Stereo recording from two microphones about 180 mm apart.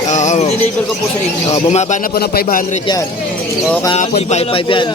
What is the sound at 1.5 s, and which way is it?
Speech, 40° left (ahead or behind).